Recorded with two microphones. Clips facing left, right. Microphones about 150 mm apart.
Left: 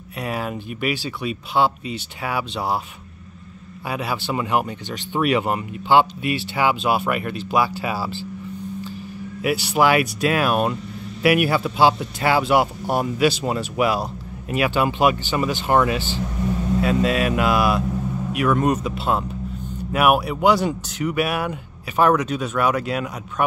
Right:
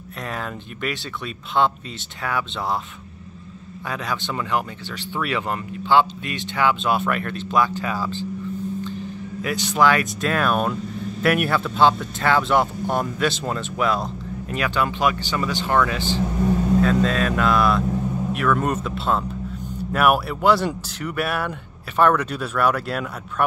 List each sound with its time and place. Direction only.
0.2 s speech: 10° left (ahead or behind)
3.9 s speech: 10° left (ahead or behind)
9.4 s speech: 10° left (ahead or behind)